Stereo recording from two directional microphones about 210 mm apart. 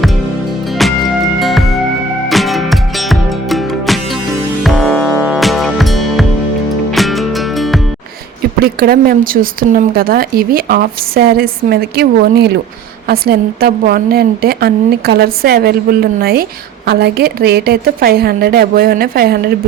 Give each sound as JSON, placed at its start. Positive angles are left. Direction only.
{"t": 1.4, "sound": "music", "side_deg": 0}
{"t": 8.6, "sound": "a woman's voice", "side_deg": -45}